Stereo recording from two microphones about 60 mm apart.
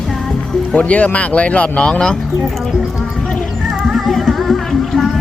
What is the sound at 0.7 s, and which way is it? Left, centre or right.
Speech, left.